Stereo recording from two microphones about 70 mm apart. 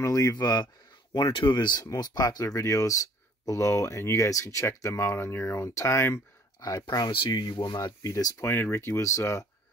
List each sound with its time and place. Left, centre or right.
0.0 s speech: left
0.4 s speech: left
1.1 s speech: left
2.0 s speech: left
6.6 s speech: left
8.4 s speech: left